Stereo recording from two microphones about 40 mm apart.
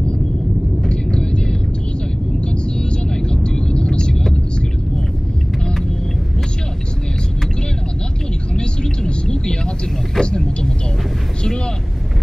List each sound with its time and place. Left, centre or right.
1.1 s vehicle: left
8.5 s vehicle: centre
10.2 s vehicle: centre